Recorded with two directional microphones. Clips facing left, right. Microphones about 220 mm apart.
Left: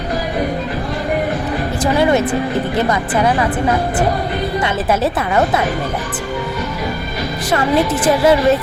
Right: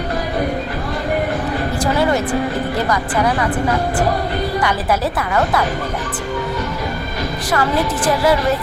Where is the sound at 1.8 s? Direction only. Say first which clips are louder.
Left 4 dB; 20° left (ahead or behind).